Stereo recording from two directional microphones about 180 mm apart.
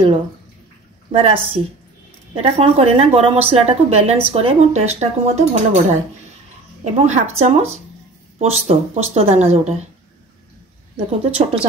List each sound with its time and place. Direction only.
1.1 s a woman's voice: 30° right (ahead or behind)
11.2 s a woman's voice: 35° right (ahead or behind)